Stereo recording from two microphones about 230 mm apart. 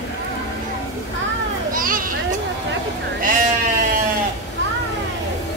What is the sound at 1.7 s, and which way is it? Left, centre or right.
Children playing, right.